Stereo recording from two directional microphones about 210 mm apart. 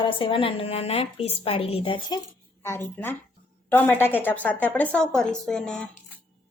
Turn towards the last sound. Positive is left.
turn(degrees=5)  # may be behind; listen again after turning